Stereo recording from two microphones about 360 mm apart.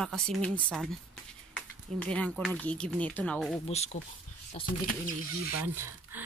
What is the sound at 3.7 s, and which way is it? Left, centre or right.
Speech, centre.